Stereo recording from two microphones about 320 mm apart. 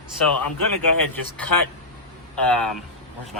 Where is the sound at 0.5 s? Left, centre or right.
Left.